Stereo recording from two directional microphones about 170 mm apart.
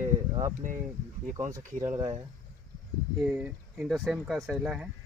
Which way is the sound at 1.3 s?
20° right (ahead or behind).